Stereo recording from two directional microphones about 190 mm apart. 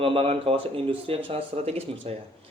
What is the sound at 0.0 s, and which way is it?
Speech, 30° right (ahead or behind).